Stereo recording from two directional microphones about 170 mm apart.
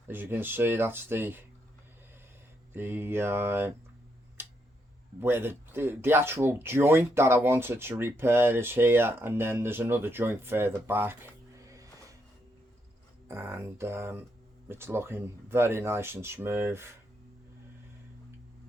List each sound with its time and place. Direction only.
0.1 s speech: 10° right (ahead or behind)
2.7 s speech: 15° right (ahead or behind)
5.2 s speech: 15° right (ahead or behind)
13.2 s speech: 15° right (ahead or behind)